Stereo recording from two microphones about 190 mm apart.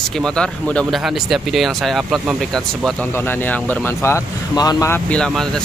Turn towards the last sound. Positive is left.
turn(degrees=5)  # may be behind; listen again after turning